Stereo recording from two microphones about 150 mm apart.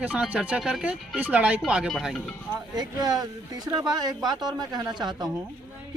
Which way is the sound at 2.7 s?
25° right (ahead or behind).